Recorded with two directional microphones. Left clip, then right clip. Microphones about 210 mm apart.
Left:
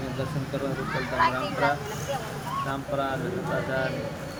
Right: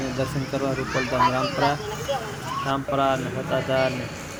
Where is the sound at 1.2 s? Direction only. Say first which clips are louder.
Right 2 dB; 50° right (ahead or behind).